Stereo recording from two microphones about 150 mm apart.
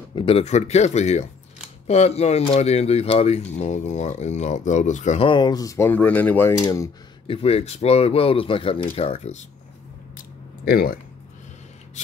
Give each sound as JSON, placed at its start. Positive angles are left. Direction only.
{"t": 0.1, "sound": "speech", "side_deg": 40}
{"t": 5.3, "sound": "speech", "side_deg": 30}
{"t": 6.6, "sound": "speech", "side_deg": 20}
{"t": 7.2, "sound": "speech", "side_deg": 40}
{"t": 10.1, "sound": "a sound", "side_deg": 85}